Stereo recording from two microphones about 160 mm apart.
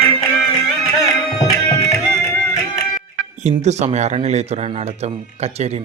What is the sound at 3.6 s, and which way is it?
Speech, 45° right (ahead or behind).